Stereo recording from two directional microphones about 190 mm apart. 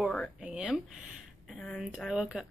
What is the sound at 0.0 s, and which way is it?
Speech, centre (ahead or behind).